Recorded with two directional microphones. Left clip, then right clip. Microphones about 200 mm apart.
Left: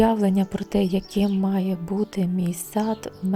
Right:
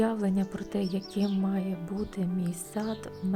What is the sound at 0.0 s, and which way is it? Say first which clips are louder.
Speech: left 9 dB; 25° left (ahead or behind).